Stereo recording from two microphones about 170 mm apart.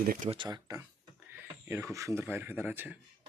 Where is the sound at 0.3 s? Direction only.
25° right (ahead or behind); by 3.0 s 10° right (ahead or behind).